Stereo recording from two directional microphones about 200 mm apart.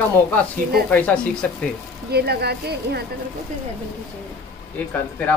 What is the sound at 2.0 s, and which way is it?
Speech, 55° right (ahead or behind).